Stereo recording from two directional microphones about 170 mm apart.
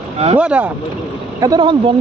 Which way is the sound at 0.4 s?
5° right (ahead or behind).